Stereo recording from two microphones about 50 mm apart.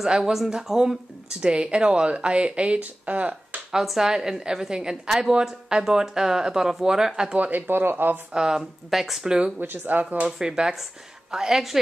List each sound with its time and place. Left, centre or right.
0.0 s speech: centre; by 3.6 s right
3.7 s speech: centre
7.3 s speech: right
8.3 s speech: centre
9.6 s speech: right
10.4 s speech: centre